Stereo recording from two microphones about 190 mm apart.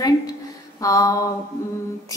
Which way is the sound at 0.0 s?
20° left (ahead or behind).